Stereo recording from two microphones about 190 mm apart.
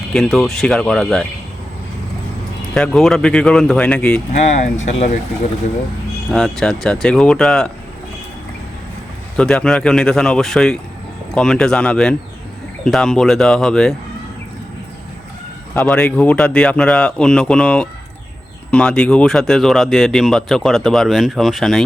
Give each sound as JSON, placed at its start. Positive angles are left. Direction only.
{"t": 0.1, "sound": "speech", "side_deg": 0}
{"t": 2.7, "sound": "speech", "side_deg": 5}
{"t": 4.3, "sound": "speech", "side_deg": 40}
{"t": 6.3, "sound": "speech", "side_deg": 5}
{"t": 9.4, "sound": "speech", "side_deg": 5}
{"t": 15.7, "sound": "speech", "side_deg": 10}